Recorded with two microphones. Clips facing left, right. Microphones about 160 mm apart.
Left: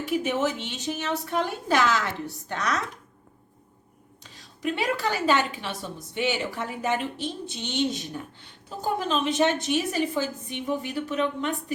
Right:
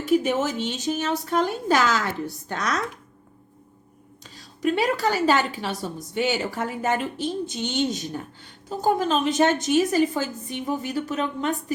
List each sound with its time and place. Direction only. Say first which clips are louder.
0.3 s a woman's voice: right 2 dB; 40° right (ahead or behind)
4.2 s a woman's voice: right 6 dB; 40° right (ahead or behind)